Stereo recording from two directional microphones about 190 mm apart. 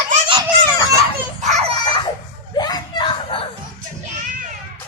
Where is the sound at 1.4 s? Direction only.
35° right (ahead or behind).